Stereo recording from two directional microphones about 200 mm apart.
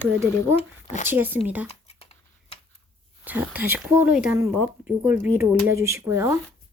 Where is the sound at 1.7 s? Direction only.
30° left (ahead or behind).